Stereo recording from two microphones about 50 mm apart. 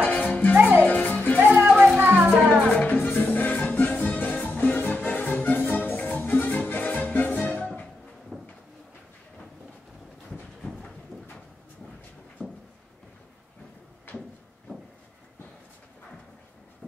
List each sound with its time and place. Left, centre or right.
0.0 s music: left
1.4 s music: right
1.7 s music: centre
2.0 s music: right
2.3 s music: centre
3.0 s music: left
8.3 s a sound: centre